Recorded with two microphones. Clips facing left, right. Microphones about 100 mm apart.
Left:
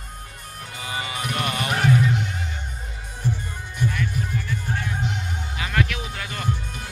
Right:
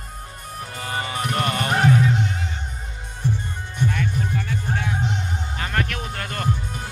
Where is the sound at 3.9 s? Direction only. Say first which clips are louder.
Right 2 dB; 60° right (ahead or behind).